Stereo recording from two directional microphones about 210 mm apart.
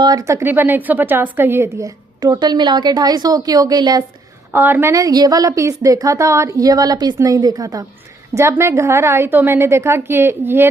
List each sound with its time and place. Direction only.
0.0 s a woman's voice: 15° right (ahead or behind)